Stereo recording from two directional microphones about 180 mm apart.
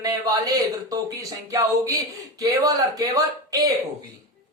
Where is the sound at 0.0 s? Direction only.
20° right (ahead or behind).